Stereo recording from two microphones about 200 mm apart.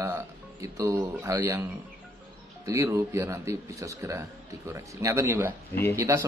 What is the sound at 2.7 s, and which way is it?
A man's voice, 15° right (ahead or behind).